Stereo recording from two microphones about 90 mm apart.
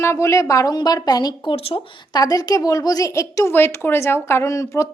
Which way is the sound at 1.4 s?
90° left.